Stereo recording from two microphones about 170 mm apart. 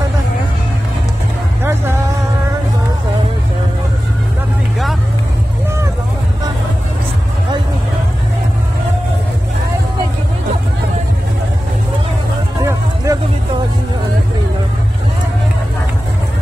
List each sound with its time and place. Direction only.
1.6 s music: 15° right (ahead or behind)
12.6 s music: 20° right (ahead or behind)